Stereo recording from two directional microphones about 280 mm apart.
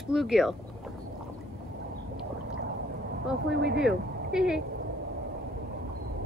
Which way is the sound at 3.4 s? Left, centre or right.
Right.